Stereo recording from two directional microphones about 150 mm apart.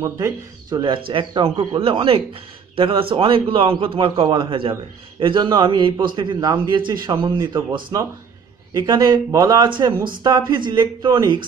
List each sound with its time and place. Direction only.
0.0 s a man's voice: 25° right (ahead or behind)